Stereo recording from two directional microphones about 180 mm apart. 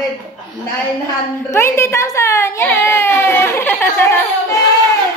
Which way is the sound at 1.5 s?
15° left (ahead or behind).